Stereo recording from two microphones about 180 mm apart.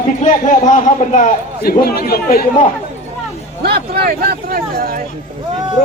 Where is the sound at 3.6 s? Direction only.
60° right (ahead or behind).